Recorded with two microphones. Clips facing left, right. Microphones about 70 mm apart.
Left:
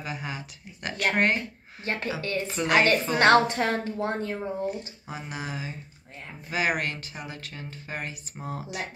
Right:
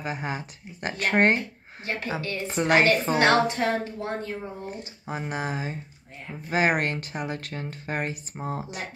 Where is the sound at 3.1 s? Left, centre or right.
Left.